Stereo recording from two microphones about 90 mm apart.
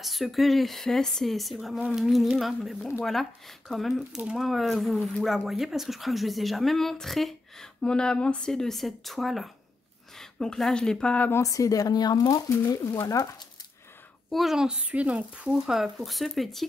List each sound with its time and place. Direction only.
0.0 s speech: centre (ahead or behind)
11.4 s speech: 40° left (ahead or behind)
14.3 s speech: 5° right (ahead or behind)